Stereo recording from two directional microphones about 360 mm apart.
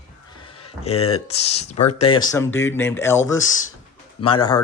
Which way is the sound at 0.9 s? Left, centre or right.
Left.